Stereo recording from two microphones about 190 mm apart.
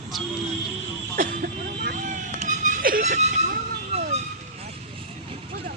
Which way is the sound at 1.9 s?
40° right (ahead or behind).